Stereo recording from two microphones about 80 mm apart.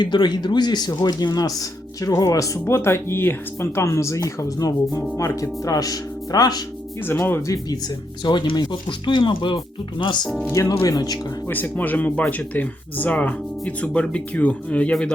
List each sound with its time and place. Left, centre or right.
0.0 s speech: left
7.1 s speech: left
7.4 s speech: left
8.2 s speech: left
10.5 s speech: left
11.4 s speech: left